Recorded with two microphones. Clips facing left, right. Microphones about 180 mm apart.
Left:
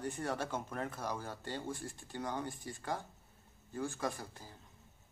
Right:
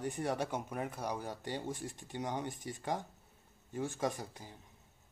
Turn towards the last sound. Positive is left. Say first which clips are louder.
# right 2 dB
turn(degrees=-15)  # may be behind; listen again after turning